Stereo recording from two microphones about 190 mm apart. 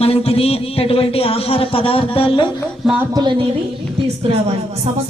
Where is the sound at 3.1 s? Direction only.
25° right (ahead or behind).